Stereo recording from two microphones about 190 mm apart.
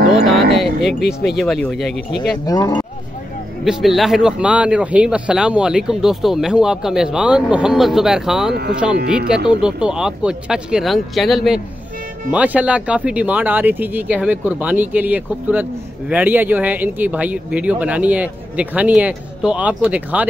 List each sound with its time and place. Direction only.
0.1 s speech: centre (ahead or behind)
2.4 s speech: 20° left (ahead or behind)
3.6 s a man's voice: centre (ahead or behind)